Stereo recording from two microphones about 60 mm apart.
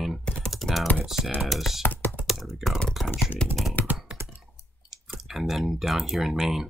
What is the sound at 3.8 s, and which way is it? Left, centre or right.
Computer keyboard, left.